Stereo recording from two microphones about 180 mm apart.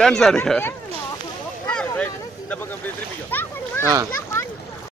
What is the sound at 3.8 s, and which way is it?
Speech, 15° right (ahead or behind).